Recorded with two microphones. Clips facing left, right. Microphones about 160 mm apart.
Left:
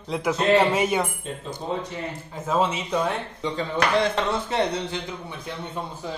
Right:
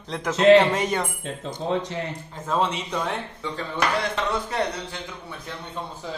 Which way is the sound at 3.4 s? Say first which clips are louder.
Left 3 dB; 25° left (ahead or behind).